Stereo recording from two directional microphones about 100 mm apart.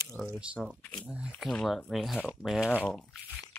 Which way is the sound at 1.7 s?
Centre (ahead or behind).